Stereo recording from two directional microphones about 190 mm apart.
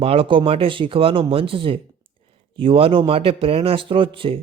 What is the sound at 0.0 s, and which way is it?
Speech, 30° right (ahead or behind).